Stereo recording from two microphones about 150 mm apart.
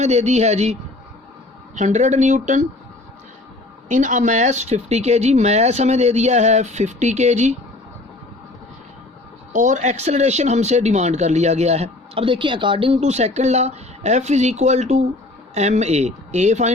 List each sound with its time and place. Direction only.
0.0 s speech: 50° right (ahead or behind)
3.8 s speech: 55° right (ahead or behind)
9.5 s speech: 55° right (ahead or behind)